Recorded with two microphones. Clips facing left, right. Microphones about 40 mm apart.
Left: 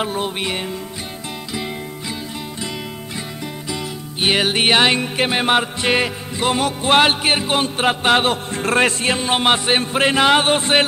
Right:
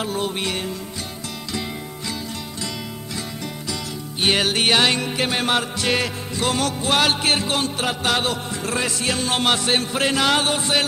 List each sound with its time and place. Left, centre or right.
0.0 s music: left
3.7 s music: centre; by 8.9 s left
9.0 s music: left